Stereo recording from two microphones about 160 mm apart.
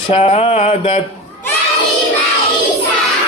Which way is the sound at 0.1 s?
40° left (ahead or behind).